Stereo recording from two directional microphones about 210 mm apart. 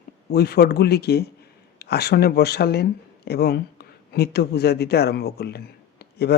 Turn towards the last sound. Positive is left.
turn(degrees=50)  # may be behind; listen again after turning